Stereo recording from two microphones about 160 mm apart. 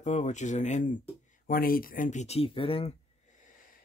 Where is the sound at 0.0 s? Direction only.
50° left (ahead or behind).